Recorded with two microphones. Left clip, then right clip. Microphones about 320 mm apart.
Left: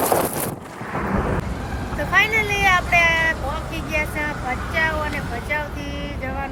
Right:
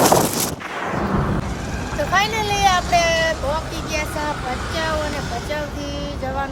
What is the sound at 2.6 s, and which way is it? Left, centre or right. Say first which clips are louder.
Vehicle: right 1 dB; centre.